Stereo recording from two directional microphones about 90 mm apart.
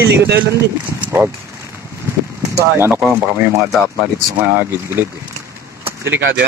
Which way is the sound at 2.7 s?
30° right (ahead or behind).